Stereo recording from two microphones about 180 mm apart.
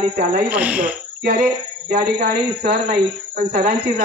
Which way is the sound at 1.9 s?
50° right (ahead or behind).